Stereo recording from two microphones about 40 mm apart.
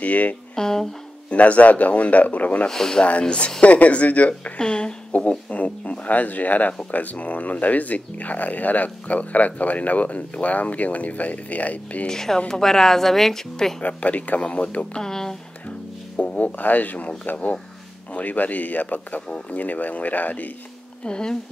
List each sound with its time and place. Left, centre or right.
0.0 s speech: left
0.6 s a woman's voice: centre
1.3 s speech: left
2.7 s a woman's voice: centre
3.0 s speech: left
4.6 s speech: left
5.1 s speech: left
12.1 s a woman's voice: centre
13.8 s speech: left
15.0 s speech: centre
16.2 s music: left
16.5 s speech: left
21.0 s speech: left